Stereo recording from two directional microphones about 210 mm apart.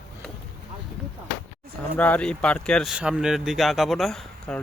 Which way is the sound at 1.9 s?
5° left (ahead or behind).